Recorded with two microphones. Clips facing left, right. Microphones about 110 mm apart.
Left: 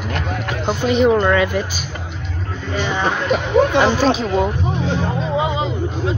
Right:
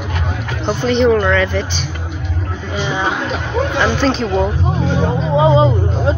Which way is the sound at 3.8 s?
5° left (ahead or behind).